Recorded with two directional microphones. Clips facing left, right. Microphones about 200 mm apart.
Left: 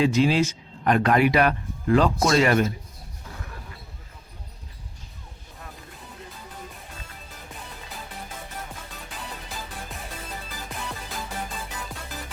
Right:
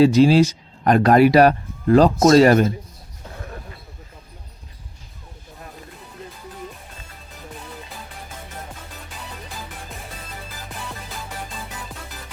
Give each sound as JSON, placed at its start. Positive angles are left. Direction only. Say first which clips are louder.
{"t": 0.0, "sound": "speech", "louder": "right 7 dB", "side_deg": -35}